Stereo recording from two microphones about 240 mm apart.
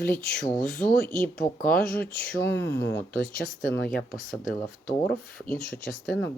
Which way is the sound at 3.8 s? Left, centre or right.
Left.